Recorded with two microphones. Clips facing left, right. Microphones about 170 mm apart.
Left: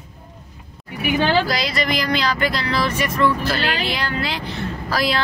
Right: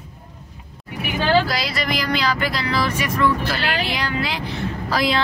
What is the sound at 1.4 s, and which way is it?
Speech, 5° right (ahead or behind).